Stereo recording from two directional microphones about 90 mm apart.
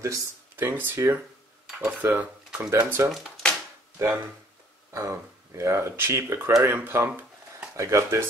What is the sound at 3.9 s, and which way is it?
Speech, 30° right (ahead or behind).